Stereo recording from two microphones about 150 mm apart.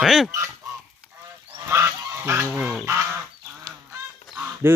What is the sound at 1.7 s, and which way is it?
Goose, 15° right (ahead or behind).